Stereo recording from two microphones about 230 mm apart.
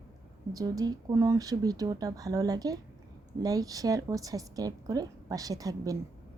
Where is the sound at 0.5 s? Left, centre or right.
Centre.